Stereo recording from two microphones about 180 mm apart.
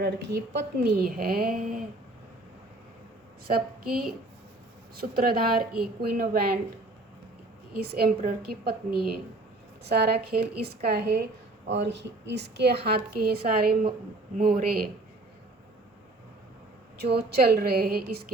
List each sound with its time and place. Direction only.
0.0 s a woman's voice: 65° right (ahead or behind)
3.4 s a woman's voice: 55° right (ahead or behind)
7.8 s a woman's voice: 60° right (ahead or behind)
11.7 s a woman's voice: 75° right (ahead or behind); by 14.8 s 50° right (ahead or behind)
17.0 s a woman's voice: 65° right (ahead or behind)